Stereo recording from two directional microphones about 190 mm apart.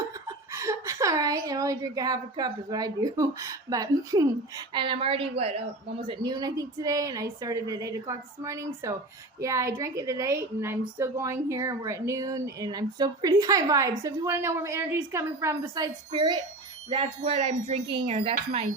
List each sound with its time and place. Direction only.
0.3 s a woman's voice: 15° right (ahead or behind)